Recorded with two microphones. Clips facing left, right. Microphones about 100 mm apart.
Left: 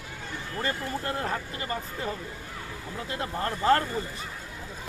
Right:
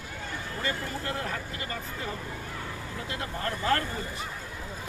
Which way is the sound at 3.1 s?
30° left (ahead or behind).